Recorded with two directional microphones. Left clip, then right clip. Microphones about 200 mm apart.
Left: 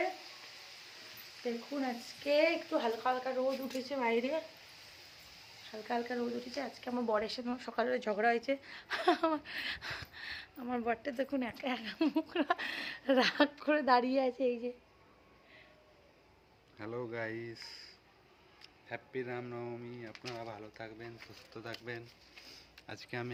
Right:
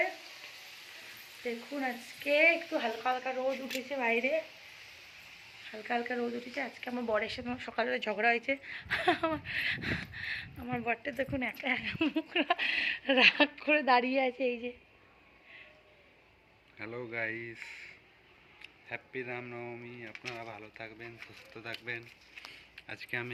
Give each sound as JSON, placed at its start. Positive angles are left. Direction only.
{"t": 1.7, "sound": "speech", "side_deg": 5}
{"t": 5.7, "sound": "speech", "side_deg": 0}
{"t": 16.7, "sound": "speech", "side_deg": 10}
{"t": 18.9, "sound": "speech", "side_deg": 10}